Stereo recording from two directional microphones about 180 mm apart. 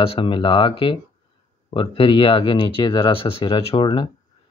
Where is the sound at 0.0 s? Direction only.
30° left (ahead or behind).